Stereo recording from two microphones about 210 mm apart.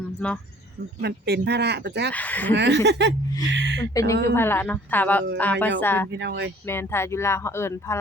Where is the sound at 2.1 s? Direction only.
10° left (ahead or behind).